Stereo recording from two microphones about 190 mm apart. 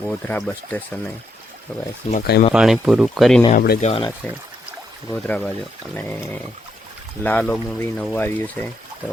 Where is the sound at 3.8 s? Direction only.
30° left (ahead or behind).